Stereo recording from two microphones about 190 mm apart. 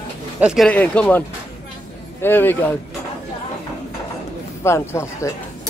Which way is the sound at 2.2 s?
10° left (ahead or behind).